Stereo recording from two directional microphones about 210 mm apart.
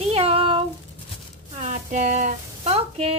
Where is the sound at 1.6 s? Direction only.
35° right (ahead or behind).